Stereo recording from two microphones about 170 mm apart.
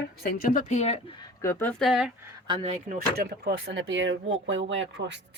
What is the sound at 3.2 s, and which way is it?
Speech, 70° right (ahead or behind).